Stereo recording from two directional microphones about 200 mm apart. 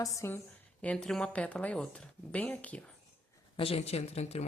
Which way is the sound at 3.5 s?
30° left (ahead or behind).